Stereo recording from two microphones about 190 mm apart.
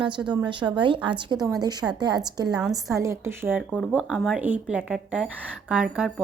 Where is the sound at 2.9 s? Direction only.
15° right (ahead or behind).